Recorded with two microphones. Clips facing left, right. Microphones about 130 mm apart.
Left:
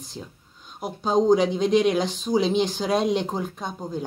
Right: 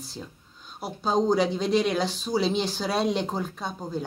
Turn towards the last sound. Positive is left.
turn(degrees=15)  # may be behind; listen again after turning